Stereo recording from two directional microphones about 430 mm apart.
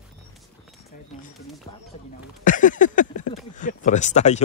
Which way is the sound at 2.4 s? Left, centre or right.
Centre.